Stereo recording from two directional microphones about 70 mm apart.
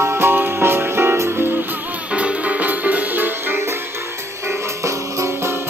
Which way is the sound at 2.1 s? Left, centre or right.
Centre.